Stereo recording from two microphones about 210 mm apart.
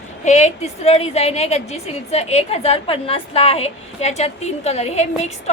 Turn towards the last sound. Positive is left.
turn(degrees=30)  # may be behind; listen again after turning